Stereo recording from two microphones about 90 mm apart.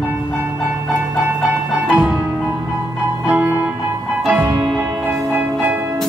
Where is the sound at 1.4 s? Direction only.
15° right (ahead or behind).